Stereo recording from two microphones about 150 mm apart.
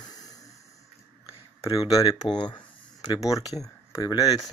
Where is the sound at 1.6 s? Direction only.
25° left (ahead or behind).